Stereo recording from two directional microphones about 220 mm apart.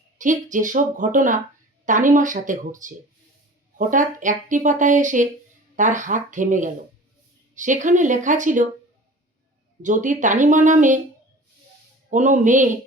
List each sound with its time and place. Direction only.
0.2 s speech: 35° right (ahead or behind)
9.8 s speech: 35° right (ahead or behind)
12.1 s speech: 35° right (ahead or behind)